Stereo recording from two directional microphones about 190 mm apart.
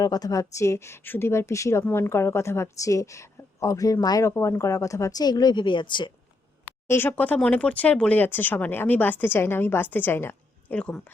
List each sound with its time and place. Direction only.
0.0 s speech: 20° left (ahead or behind)
6.8 s speech: 10° left (ahead or behind)